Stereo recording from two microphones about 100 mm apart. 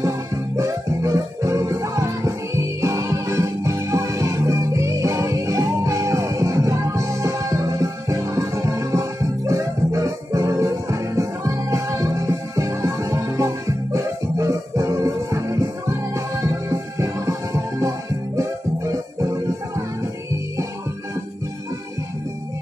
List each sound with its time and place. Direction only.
0.6 s music: 30° right (ahead or behind)